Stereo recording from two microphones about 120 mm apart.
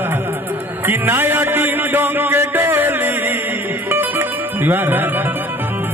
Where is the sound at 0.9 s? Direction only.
20° right (ahead or behind).